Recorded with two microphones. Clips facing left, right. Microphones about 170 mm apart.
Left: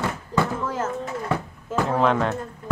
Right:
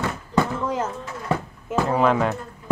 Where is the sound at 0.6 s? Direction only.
15° right (ahead or behind).